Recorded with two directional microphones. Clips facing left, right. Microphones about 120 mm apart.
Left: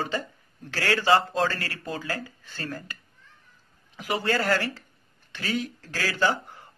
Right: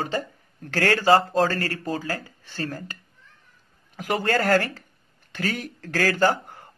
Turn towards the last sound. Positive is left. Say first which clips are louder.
# right 4 dB
turn(degrees=-50)  # may be behind; listen again after turning